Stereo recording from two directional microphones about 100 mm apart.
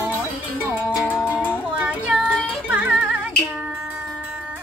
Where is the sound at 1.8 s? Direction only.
15° right (ahead or behind).